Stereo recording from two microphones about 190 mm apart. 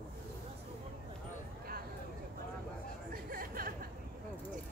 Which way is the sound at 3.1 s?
50° right (ahead or behind).